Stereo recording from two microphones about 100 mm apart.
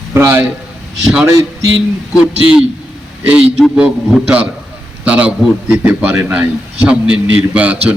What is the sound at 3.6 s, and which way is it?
A man's voice, 5° right (ahead or behind).